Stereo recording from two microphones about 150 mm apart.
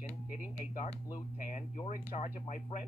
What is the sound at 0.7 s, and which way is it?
Speech, 60° left (ahead or behind).